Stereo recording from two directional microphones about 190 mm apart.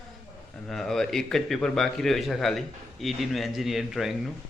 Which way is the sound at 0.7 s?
Centre (ahead or behind).